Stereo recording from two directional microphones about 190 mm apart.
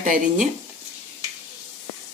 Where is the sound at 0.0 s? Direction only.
45° right (ahead or behind).